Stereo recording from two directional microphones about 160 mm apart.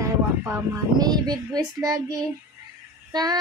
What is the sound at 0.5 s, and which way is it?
Child singing, 25° right (ahead or behind).